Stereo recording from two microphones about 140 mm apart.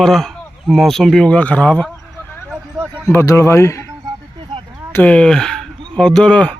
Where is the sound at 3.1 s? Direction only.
20° left (ahead or behind).